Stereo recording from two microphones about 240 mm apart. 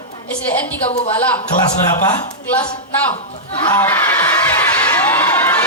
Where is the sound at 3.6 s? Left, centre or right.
Centre.